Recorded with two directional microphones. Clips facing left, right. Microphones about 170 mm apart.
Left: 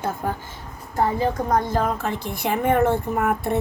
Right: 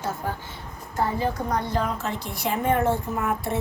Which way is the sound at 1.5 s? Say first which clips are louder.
Left 4 dB; 45° left (ahead or behind).